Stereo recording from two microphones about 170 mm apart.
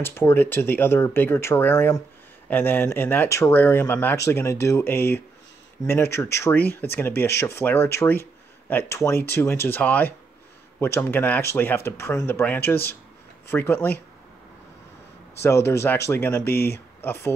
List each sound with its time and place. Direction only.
0.0 s speech: 15° left (ahead or behind)
15.4 s speech: 15° left (ahead or behind)
16.5 s speech: 65° left (ahead or behind)
17.0 s speech: 15° left (ahead or behind)